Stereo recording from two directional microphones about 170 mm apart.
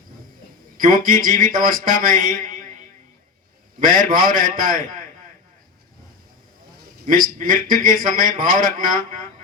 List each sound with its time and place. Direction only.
0.8 s a man's voice: 55° right (ahead or behind)
3.8 s a man's voice: 55° right (ahead or behind)
7.0 s a man's voice: 55° right (ahead or behind)